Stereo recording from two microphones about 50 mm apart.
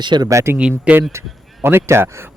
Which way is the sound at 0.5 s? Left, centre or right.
Right.